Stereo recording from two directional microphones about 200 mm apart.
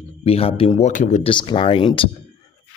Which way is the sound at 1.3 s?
25° left (ahead or behind).